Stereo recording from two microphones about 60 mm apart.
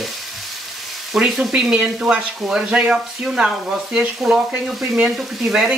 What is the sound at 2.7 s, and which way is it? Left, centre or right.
Speech, centre.